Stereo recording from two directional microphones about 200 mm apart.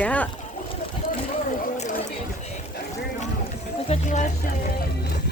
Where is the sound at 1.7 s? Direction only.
35° left (ahead or behind).